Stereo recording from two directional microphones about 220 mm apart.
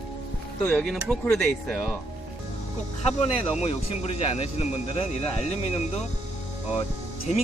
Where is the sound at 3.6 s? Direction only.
30° left (ahead or behind).